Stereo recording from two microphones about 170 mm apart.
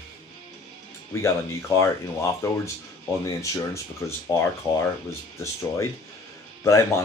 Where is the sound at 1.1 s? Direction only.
15° left (ahead or behind).